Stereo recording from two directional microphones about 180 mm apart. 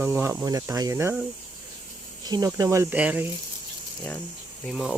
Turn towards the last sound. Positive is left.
turn(degrees=0)  # may be behind; listen again after turning